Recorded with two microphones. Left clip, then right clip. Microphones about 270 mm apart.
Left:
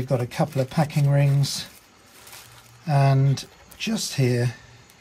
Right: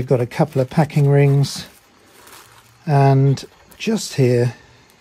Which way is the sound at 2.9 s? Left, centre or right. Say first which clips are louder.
Right 7 dB; right.